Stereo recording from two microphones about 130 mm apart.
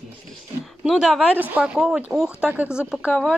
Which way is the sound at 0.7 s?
Centre (ahead or behind).